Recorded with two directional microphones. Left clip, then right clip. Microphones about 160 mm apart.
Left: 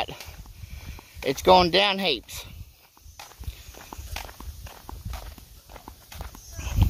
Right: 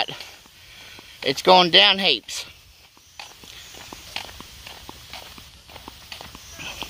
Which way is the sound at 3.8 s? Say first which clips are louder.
Right 4 dB; 10° left (ahead or behind).